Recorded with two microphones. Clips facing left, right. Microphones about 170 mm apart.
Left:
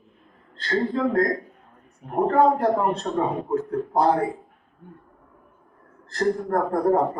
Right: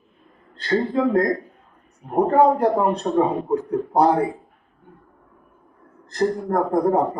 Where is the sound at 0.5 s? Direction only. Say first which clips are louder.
Right 3 dB; 15° right (ahead or behind).